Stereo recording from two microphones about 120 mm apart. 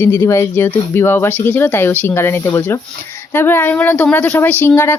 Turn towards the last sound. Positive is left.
turn(degrees=20)  # may be behind; listen again after turning